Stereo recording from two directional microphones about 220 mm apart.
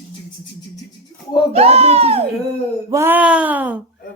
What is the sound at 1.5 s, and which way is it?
Speech, 30° right (ahead or behind).